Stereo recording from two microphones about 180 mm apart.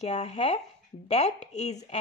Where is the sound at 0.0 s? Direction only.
35° left (ahead or behind).